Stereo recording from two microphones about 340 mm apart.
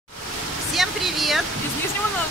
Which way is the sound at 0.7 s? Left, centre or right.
Centre.